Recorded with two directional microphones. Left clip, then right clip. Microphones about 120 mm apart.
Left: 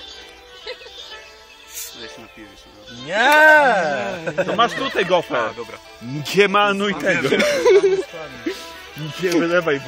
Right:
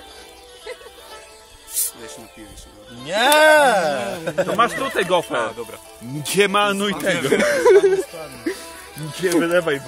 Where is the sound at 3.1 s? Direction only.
Centre (ahead or behind).